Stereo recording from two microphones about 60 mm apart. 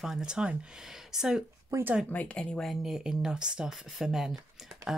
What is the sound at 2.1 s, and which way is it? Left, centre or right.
Speech, left.